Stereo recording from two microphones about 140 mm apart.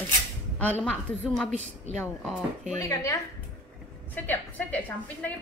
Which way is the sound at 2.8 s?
20° left (ahead or behind).